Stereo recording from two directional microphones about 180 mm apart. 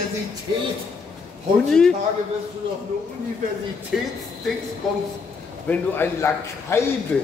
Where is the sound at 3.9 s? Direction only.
5° right (ahead or behind).